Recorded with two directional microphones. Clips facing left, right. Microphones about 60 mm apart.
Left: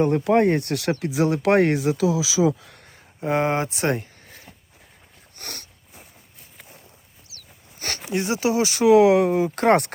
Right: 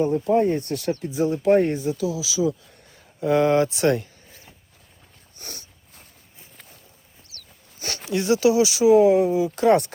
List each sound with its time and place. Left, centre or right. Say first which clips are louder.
0.0 s speech: left 2 dB; left
2.4 s speech: left 3 dB; left
3.2 s speech: right 4 dB; left
5.4 s a sound: left 3 dB; left
7.8 s a sound: left 2 dB; left
8.0 s speech: right 4 dB; left
8.8 s speech: left 1 dB; left